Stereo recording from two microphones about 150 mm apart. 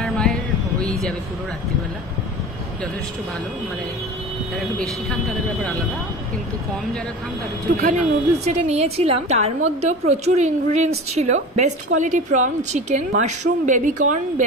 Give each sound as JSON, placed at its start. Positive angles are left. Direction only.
{"t": 0.0, "sound": "a sound", "side_deg": 5}
{"t": 4.6, "sound": "speech", "side_deg": 0}
{"t": 7.7, "sound": "a woman's voice", "side_deg": -55}